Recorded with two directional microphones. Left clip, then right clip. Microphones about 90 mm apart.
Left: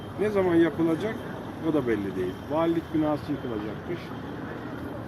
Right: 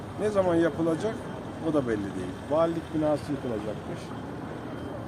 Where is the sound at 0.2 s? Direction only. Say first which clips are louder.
Left 1 dB; 45° right (ahead or behind).